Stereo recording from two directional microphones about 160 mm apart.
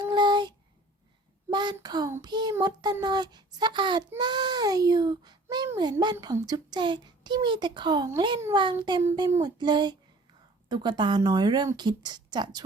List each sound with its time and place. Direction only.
0.0 s child singing: 30° right (ahead or behind)
1.5 s a child's voice: 30° right (ahead or behind)